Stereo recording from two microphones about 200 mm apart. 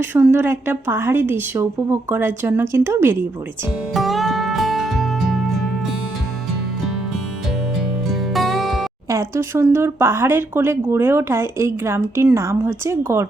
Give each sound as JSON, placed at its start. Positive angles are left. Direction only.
{"t": 0.0, "sound": "speech", "side_deg": -10}
{"t": 3.9, "sound": "music", "side_deg": 0}
{"t": 8.1, "sound": "music", "side_deg": 0}
{"t": 9.0, "sound": "speech", "side_deg": -15}